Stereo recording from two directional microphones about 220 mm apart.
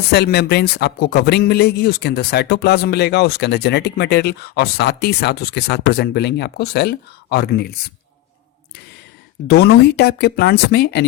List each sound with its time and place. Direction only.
0.1 s speech: 50° left (ahead or behind)
9.5 s speech: 45° left (ahead or behind)